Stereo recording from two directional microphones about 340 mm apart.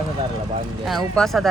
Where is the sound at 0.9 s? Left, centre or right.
Centre.